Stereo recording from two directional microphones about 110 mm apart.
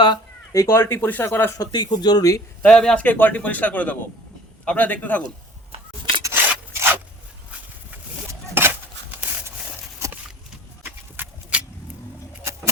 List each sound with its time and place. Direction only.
0.0 s speech: 35° left (ahead or behind); by 1.5 s 20° left (ahead or behind)
1.5 s speech: 35° left (ahead or behind)
2.6 s speech: 5° left (ahead or behind)
6.3 s rub: 20° right (ahead or behind)
8.3 s a sound: 20° right (ahead or behind)
11.2 s a sound: 15° right (ahead or behind)